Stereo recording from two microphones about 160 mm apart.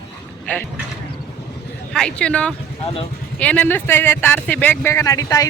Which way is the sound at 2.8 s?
35° left (ahead or behind).